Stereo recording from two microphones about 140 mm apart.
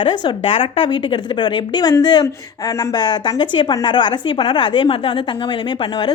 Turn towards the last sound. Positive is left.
turn(degrees=35)  # may be behind; listen again after turning